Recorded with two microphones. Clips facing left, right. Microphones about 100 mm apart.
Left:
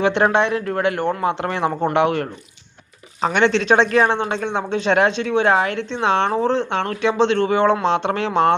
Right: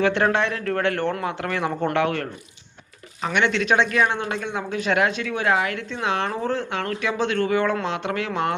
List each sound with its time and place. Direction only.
0.0 s speech: 20° left (ahead or behind)
3.2 s speech: 35° left (ahead or behind)